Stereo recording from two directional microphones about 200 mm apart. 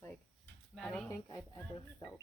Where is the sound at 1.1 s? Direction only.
15° left (ahead or behind).